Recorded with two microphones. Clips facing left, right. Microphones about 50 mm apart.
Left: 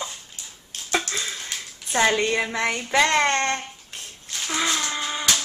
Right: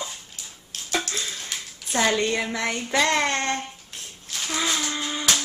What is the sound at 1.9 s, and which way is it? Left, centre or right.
Child singing, centre.